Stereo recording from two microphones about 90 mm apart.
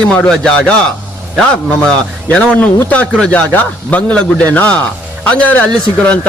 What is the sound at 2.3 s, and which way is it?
A man's voice, 15° left (ahead or behind).